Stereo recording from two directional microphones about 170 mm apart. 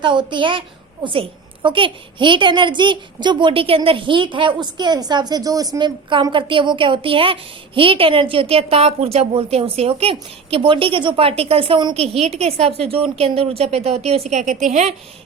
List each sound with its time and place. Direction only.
0.0 s a woman's voice: 30° right (ahead or behind); by 14.8 s 45° right (ahead or behind)